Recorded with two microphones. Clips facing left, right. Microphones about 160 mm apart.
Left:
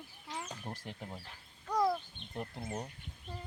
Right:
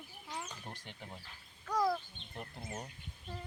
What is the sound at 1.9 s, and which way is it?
Bird, centre (ahead or behind).